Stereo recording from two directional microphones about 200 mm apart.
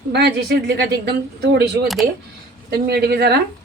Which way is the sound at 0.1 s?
55° right (ahead or behind).